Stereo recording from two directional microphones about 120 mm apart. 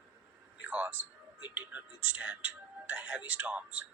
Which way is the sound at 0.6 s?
10° right (ahead or behind).